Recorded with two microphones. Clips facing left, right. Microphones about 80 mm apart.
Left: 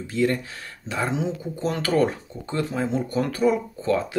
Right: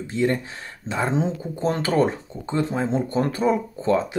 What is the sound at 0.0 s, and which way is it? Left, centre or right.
Speech, right.